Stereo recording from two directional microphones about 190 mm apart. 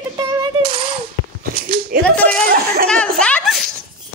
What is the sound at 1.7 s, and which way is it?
Slap, 55° right (ahead or behind).